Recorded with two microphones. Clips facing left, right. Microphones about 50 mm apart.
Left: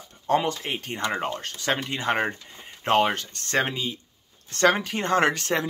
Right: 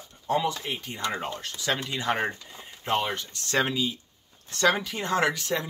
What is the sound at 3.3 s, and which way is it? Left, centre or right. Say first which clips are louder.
Speech: left 1 dB; left.